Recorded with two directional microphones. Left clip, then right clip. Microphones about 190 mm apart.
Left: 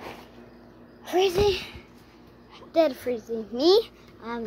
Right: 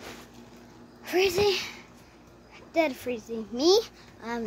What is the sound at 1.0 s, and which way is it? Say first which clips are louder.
A child's voice: left 2 dB; 5° right (ahead or behind).